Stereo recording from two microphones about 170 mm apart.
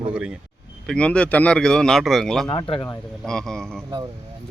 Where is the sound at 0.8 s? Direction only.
5° left (ahead or behind).